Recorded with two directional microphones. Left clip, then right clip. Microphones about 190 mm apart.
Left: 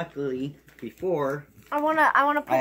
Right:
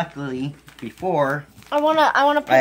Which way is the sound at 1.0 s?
50° right (ahead or behind).